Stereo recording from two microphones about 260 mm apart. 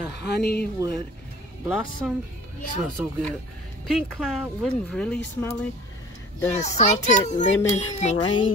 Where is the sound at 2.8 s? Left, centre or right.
Centre.